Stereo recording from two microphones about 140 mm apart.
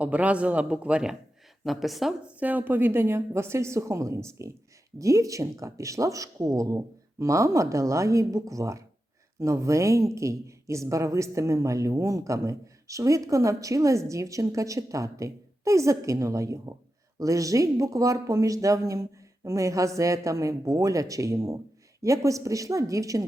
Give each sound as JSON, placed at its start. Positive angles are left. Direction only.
{"t": 0.0, "sound": "a woman's voice", "side_deg": -10}